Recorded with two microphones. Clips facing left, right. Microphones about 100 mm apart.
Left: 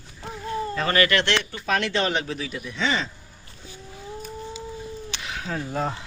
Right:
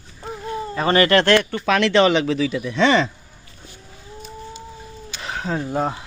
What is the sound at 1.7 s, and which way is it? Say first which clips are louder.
Speech: right 8 dB; 90° right.